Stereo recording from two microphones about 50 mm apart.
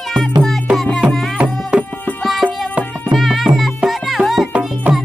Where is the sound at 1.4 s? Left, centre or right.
Centre.